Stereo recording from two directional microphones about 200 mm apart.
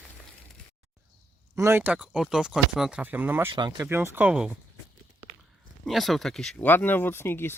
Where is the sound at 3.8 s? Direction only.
10° right (ahead or behind).